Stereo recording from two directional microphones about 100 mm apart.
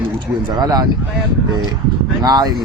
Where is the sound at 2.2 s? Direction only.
40° right (ahead or behind).